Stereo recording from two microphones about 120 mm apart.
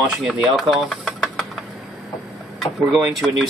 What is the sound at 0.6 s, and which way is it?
Knock, centre (ahead or behind).